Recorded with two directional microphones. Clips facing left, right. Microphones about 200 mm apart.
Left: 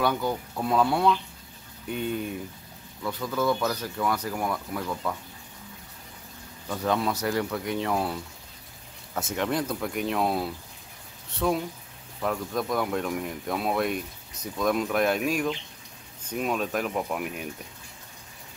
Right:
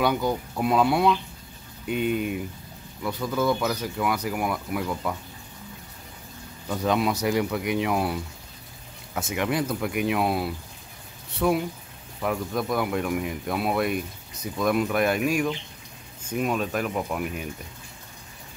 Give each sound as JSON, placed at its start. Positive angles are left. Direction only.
{"t": 0.0, "sound": "speech", "side_deg": -15}
{"t": 6.7, "sound": "speech", "side_deg": -15}